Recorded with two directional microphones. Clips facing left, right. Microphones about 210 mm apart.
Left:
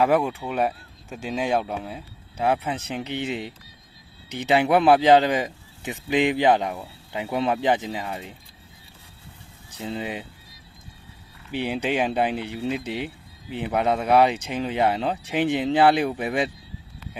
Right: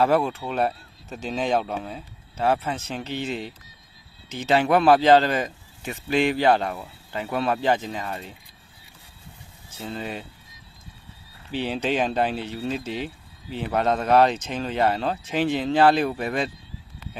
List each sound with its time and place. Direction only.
0.0 s speech: 15° left (ahead or behind)
9.6 s speech: 15° left (ahead or behind)
11.5 s speech: 15° left (ahead or behind)